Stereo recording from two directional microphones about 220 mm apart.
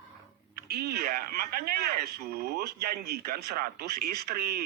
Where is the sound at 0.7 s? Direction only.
45° right (ahead or behind).